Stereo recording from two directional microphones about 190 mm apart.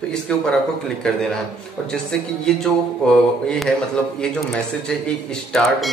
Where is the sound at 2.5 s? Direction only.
5° left (ahead or behind).